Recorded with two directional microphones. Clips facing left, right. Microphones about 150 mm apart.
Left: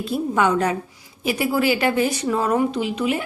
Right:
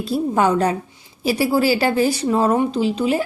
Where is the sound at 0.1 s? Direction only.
35° right (ahead or behind).